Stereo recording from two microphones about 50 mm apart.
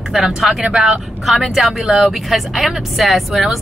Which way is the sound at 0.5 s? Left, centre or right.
Centre.